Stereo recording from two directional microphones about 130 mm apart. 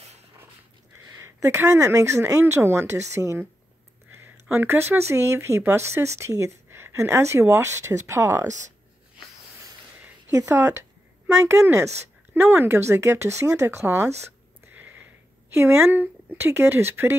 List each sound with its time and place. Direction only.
1.0 s speech: 25° right (ahead or behind)
10.3 s speech: 25° right (ahead or behind)
14.7 s a sound: 15° right (ahead or behind)
15.5 s speech: 20° right (ahead or behind)